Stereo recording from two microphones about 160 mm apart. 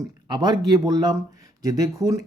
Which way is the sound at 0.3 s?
25° right (ahead or behind).